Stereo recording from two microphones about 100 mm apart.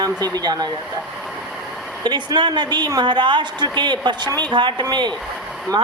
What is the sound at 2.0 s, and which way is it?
A woman's voice, 45° right (ahead or behind).